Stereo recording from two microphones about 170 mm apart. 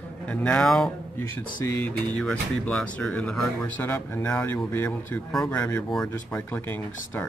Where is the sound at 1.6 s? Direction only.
15° left (ahead or behind).